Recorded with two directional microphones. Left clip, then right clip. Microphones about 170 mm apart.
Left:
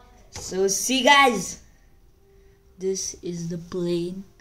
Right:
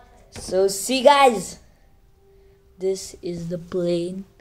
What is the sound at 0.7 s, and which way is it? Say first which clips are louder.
Speech: even; 15° left (ahead or behind).